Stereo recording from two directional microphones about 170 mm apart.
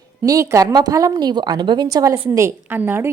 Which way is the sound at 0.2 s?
20° right (ahead or behind).